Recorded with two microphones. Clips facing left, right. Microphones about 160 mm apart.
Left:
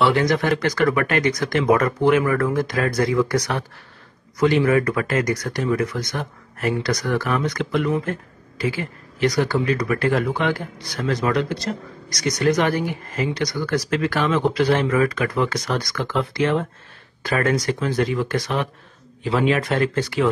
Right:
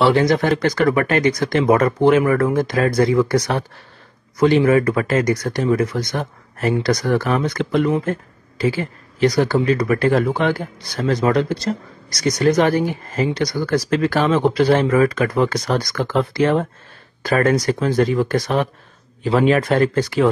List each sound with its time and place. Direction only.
0.0 s speech: 30° right (ahead or behind)